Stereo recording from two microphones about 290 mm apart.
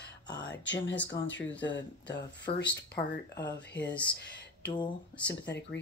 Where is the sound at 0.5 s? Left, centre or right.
Left.